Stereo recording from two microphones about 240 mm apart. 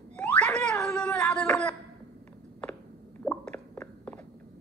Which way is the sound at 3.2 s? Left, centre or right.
Centre.